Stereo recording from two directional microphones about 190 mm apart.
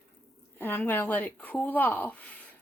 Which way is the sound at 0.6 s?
10° left (ahead or behind).